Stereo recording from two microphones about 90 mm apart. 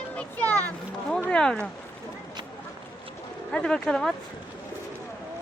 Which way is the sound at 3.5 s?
10° left (ahead or behind).